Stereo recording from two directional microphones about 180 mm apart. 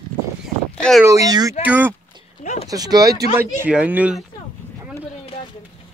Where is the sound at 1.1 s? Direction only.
20° right (ahead or behind).